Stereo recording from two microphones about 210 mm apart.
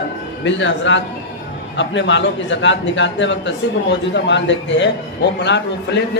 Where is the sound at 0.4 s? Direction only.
60° left (ahead or behind).